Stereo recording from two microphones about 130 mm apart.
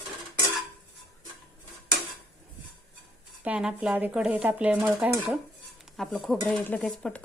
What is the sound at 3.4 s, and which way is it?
Speech, 10° right (ahead or behind).